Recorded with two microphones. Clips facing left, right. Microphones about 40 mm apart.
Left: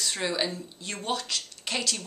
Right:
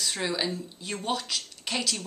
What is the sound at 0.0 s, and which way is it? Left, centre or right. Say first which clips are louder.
A woman's voice: even; centre.